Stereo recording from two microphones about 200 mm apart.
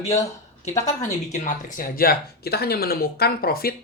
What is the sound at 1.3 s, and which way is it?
Speech, 40° left (ahead or behind).